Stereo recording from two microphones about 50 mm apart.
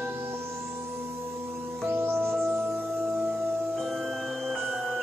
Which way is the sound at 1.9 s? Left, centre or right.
Right.